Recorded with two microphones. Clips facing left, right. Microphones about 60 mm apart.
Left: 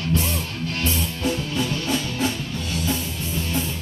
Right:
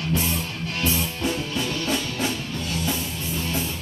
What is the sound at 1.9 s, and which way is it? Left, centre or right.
Music, centre.